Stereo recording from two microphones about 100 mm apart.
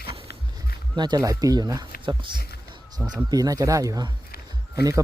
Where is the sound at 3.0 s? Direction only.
15° right (ahead or behind).